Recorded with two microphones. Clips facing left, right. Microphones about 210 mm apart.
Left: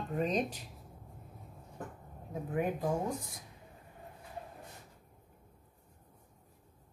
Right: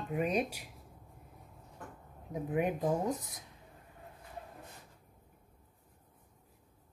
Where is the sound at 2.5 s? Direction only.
20° right (ahead or behind).